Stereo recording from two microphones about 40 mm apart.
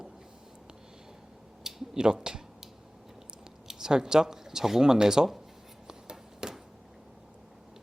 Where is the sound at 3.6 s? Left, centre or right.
Centre.